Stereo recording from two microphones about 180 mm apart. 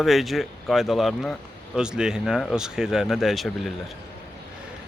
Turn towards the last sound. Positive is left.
turn(degrees=0)  # may be behind; listen again after turning